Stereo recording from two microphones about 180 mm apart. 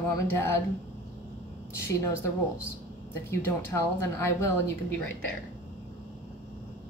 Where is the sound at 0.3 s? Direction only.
15° left (ahead or behind).